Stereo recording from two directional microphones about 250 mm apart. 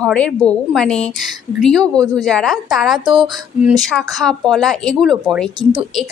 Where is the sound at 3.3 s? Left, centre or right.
Centre.